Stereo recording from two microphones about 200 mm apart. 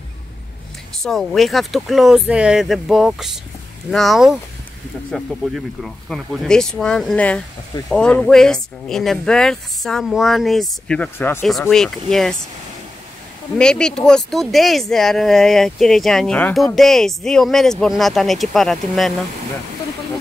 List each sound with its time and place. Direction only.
1.0 s speech: centre (ahead or behind)
13.6 s speech: 5° left (ahead or behind)